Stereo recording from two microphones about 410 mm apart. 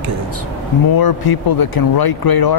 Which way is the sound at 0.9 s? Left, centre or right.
Left.